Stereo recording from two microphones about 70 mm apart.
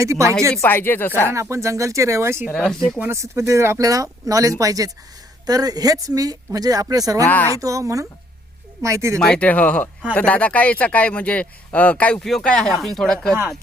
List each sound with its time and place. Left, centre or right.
0.0 s speech: right
0.7 s speech: left
1.3 s speech: right
2.6 s speech: centre
3.1 s speech: right
7.3 s speech: left
7.6 s speech: right
9.1 s speech: centre
12.2 s speech: centre